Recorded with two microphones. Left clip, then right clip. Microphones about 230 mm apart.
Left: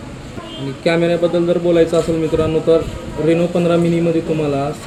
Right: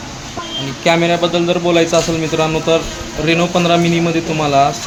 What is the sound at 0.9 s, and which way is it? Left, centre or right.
Speech, right.